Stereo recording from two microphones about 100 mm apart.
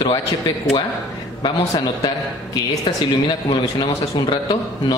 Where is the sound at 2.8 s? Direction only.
55° left (ahead or behind).